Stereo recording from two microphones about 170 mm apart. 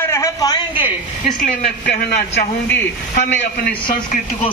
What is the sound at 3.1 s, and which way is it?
Speech, 60° left (ahead or behind).